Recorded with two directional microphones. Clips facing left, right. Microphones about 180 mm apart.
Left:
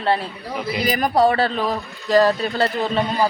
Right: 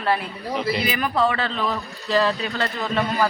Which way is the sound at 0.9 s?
40° left (ahead or behind).